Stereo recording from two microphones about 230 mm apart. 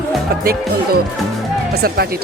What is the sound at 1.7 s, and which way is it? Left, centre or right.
Speech, right.